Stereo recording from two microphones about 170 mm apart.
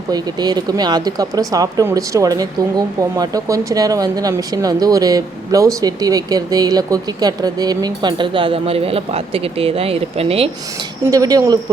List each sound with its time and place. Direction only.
0.1 s speech: 25° right (ahead or behind)
11.1 s speech: 20° right (ahead or behind)